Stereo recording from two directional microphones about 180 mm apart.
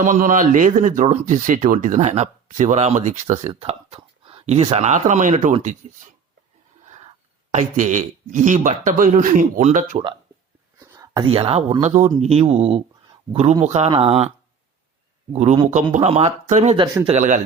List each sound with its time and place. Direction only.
0.0 s speech: 45° right (ahead or behind)
7.5 s speech: 45° right (ahead or behind)
10.8 s whispering: 15° right (ahead or behind)
11.3 s speech: 35° right (ahead or behind)
16.7 s speech: 25° right (ahead or behind)
17.2 s speech: 45° right (ahead or behind)